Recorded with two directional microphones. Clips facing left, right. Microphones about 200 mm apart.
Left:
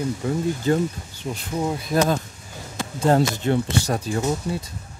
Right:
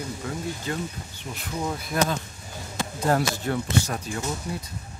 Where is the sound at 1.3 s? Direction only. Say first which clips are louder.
Left 8 dB; 25° left (ahead or behind).